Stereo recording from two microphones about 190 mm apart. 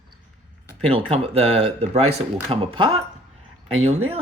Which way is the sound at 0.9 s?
30° right (ahead or behind).